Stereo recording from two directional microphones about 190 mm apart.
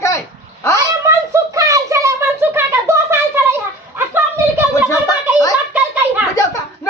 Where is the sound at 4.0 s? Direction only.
10° right (ahead or behind).